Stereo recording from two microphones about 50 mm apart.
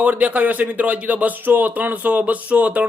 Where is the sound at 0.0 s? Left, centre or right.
Right.